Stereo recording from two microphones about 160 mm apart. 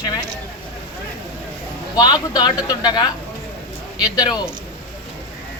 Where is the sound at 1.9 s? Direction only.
25° left (ahead or behind).